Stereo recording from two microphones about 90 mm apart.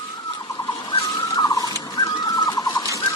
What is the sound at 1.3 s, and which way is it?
Fowl, 45° left (ahead or behind).